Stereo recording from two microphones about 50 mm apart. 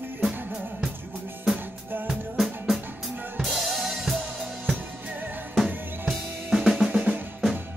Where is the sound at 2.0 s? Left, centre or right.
Centre.